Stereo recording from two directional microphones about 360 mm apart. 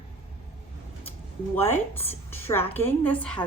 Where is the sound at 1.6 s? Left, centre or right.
Centre.